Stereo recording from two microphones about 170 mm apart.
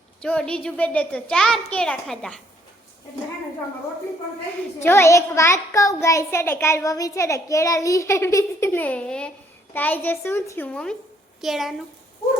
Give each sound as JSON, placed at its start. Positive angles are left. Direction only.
{"t": 0.2, "sound": "a child's voice", "side_deg": 5}
{"t": 4.8, "sound": "a child's voice", "side_deg": 15}